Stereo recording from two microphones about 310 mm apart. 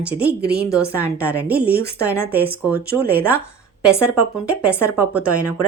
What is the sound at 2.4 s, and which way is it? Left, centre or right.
Speech, right.